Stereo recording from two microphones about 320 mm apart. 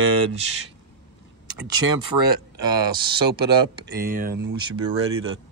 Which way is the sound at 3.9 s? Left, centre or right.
Right.